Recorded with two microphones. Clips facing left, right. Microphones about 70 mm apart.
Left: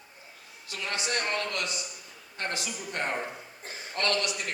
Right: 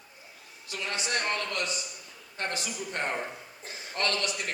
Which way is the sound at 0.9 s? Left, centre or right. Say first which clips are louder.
Even; right.